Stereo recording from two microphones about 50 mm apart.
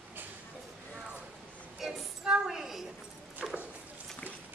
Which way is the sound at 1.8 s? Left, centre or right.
Centre.